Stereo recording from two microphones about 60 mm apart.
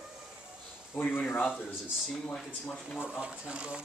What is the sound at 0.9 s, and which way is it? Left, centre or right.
Speech, left.